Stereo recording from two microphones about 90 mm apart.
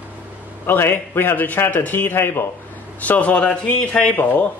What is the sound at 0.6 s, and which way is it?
A man's voice, 25° left (ahead or behind).